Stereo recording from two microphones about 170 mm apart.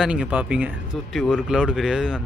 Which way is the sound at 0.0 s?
5° right (ahead or behind).